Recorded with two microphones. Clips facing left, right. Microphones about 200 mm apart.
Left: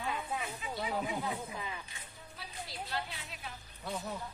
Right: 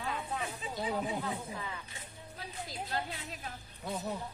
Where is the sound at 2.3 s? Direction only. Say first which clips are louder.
Right 3 dB; 45° right (ahead or behind).